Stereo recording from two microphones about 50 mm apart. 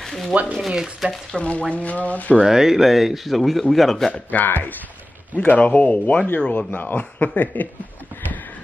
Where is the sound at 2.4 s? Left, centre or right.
Centre.